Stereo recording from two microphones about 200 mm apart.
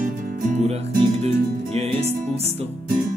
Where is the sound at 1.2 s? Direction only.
30° right (ahead or behind).